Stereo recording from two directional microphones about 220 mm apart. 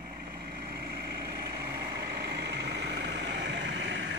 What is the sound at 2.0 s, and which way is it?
Vehicle, 45° right (ahead or behind).